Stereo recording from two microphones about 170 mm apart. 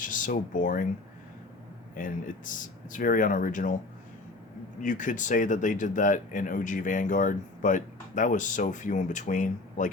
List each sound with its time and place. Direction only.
0.0 s speech: 50° left (ahead or behind)
2.0 s speech: 50° left (ahead or behind)
4.8 s speech: 50° left (ahead or behind)